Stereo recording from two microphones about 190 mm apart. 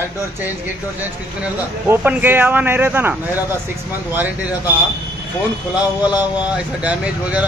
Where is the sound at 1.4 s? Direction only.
10° right (ahead or behind).